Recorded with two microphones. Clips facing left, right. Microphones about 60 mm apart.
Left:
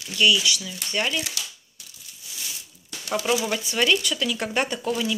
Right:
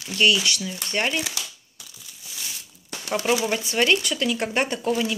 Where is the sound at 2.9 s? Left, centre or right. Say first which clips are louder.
Right 1 dB; right.